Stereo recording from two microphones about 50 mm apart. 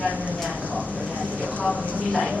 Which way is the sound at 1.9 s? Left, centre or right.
Left.